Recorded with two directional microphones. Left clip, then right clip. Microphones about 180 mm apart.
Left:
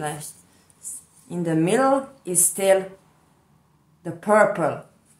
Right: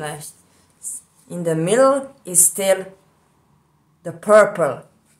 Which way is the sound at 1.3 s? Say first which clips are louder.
Right 2 dB; 30° right (ahead or behind).